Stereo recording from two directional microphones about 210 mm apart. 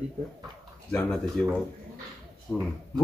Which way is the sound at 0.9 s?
5° left (ahead or behind).